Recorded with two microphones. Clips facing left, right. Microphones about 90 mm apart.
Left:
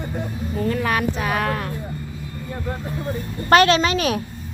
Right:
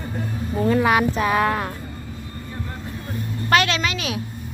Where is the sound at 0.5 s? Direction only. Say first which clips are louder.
Right 4 dB; 20° right (ahead or behind).